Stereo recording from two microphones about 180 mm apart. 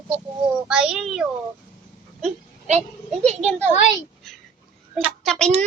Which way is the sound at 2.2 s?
40° right (ahead or behind).